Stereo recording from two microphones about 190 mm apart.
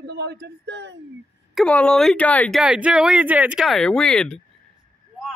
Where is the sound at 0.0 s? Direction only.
60° right (ahead or behind).